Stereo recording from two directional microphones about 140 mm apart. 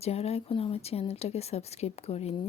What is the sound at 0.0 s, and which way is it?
A woman's voice, 45° left (ahead or behind).